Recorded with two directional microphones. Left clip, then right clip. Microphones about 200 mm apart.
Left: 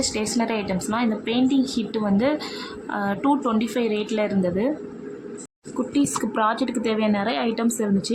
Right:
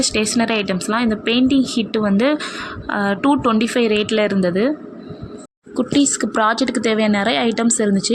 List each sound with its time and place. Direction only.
0.0 s a woman's voice: 25° right (ahead or behind)
5.9 s a woman's voice: 20° right (ahead or behind)